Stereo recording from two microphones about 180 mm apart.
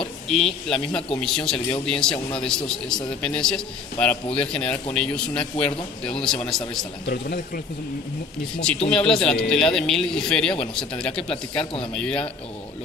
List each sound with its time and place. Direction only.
0.0 s a man's voice: 5° left (ahead or behind)
7.1 s speech: 55° left (ahead or behind)
8.9 s a man's voice: 5° left (ahead or behind)